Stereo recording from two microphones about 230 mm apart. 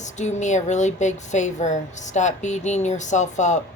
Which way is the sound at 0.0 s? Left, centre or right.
Left.